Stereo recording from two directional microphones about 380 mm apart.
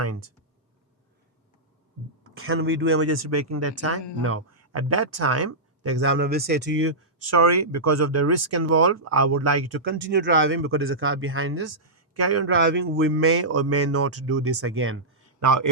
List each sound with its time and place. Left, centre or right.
0.0 s speech: right
2.3 s speech: right
15.4 s speech: right